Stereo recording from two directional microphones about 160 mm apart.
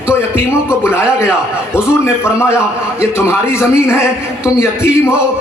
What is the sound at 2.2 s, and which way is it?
A man's voice, 15° left (ahead or behind).